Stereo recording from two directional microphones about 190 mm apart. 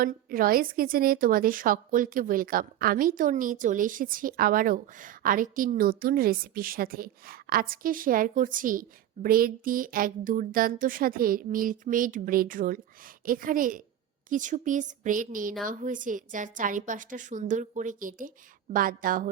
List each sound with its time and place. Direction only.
0.0 s a woman's voice: 50° right (ahead or behind)